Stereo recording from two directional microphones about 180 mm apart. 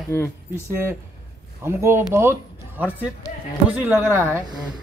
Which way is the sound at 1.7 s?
15° right (ahead or behind).